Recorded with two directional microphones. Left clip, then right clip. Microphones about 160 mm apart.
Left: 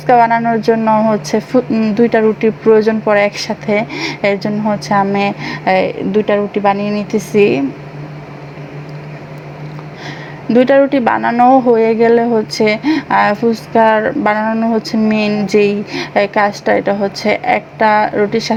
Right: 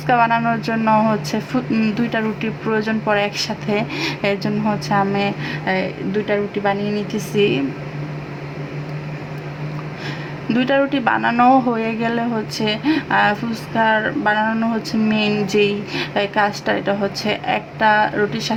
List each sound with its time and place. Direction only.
0.1 s speech: 20° left (ahead or behind)
4.9 s a woman's voice: 30° left (ahead or behind)
10.5 s speech: 25° left (ahead or behind)
11.3 s speech: 15° left (ahead or behind)